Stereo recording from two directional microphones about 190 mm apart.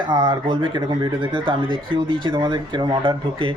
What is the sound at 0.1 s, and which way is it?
Speech, 25° right (ahead or behind).